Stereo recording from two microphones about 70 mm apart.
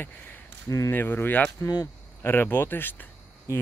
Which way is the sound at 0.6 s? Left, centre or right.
Left.